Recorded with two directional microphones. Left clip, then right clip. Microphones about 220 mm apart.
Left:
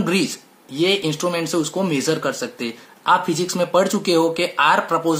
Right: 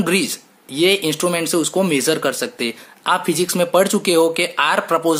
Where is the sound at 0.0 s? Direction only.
40° right (ahead or behind).